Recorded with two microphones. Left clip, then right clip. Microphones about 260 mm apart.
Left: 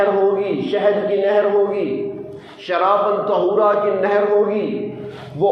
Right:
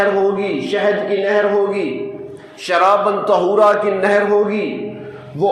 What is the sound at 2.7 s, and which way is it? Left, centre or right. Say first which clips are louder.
A man's voice: right 3 dB; right.